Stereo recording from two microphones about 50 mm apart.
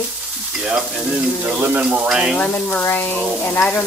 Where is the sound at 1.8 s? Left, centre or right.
Centre.